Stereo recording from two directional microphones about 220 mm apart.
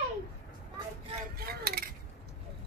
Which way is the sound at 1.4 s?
45° right (ahead or behind).